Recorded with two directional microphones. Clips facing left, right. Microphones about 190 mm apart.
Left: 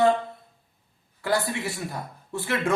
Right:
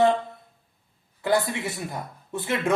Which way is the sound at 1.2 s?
20° right (ahead or behind).